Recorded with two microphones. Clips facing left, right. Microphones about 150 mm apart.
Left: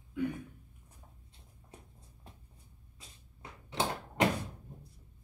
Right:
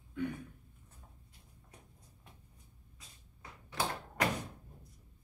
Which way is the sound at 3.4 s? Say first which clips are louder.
Left 3 dB; 25° left (ahead or behind).